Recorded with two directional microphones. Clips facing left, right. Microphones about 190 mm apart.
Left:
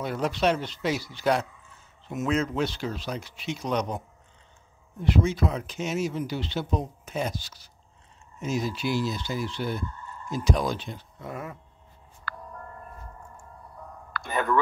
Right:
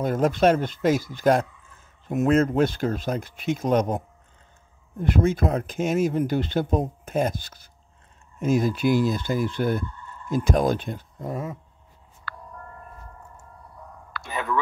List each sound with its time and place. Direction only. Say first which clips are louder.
0.0 s speech: right 6 dB; 45° right (ahead or behind)
12.3 s music: left 1 dB; 50° left (ahead or behind)
14.3 s speech: left 2 dB; centre (ahead or behind)